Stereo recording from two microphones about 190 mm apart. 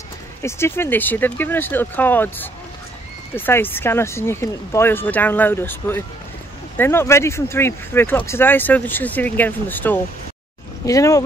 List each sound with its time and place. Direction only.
0.4 s speech: 15° left (ahead or behind)